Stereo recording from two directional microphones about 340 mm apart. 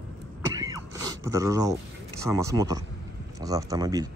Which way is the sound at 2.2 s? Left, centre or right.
Centre.